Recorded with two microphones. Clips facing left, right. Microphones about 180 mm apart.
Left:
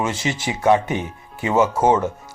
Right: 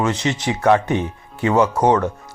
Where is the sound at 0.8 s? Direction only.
5° left (ahead or behind).